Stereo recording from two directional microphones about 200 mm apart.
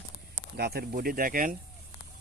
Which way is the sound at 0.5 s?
50° right (ahead or behind).